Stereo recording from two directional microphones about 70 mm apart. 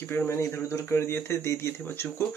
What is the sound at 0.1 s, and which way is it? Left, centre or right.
Speech, left.